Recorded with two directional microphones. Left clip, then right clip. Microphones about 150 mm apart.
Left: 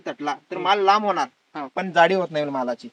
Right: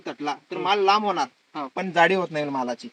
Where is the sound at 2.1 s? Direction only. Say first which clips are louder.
Left 2 dB; 5° right (ahead or behind).